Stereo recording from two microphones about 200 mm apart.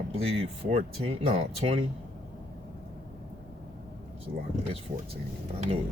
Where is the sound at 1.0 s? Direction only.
30° right (ahead or behind).